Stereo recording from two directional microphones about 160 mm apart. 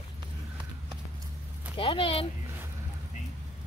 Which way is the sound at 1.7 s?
35° left (ahead or behind).